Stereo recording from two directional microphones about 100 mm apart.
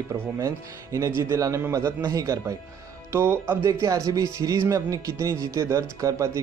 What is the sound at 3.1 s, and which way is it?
A man's voice, 25° right (ahead or behind).